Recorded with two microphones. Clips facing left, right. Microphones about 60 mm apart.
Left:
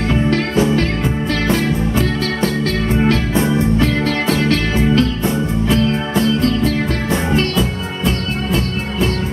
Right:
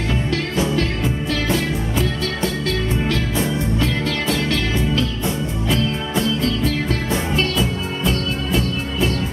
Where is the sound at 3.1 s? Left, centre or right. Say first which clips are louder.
Left 5 dB; left.